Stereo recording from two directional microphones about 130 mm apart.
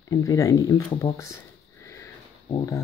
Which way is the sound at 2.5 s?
25° left (ahead or behind).